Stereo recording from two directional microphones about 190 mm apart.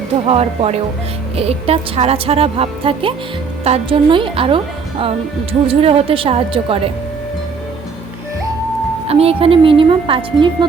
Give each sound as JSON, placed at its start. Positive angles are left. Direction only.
{"t": 0.3, "sound": "a woman's voice", "side_deg": -30}
{"t": 9.0, "sound": "a woman's voice", "side_deg": -30}